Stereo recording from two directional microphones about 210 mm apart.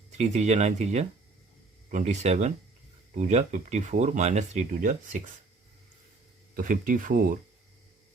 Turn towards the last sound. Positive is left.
turn(degrees=-40)  # may be behind; listen again after turning